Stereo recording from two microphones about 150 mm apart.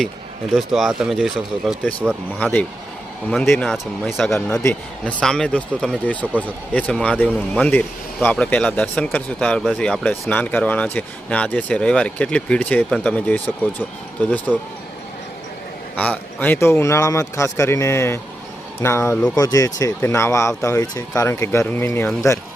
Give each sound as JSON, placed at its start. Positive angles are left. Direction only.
{"t": 0.5, "sound": "speech", "side_deg": 0}
{"t": 2.4, "sound": "speech", "side_deg": 10}
{"t": 4.4, "sound": "speech", "side_deg": 15}
{"t": 16.0, "sound": "speech", "side_deg": 10}